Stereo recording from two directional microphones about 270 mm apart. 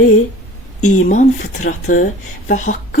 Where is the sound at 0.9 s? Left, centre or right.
Left.